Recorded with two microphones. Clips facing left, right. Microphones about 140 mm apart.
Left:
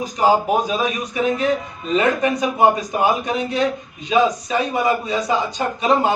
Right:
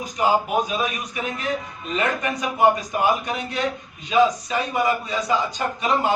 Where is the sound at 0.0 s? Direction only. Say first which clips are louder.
Left 4 dB; 35° left (ahead or behind).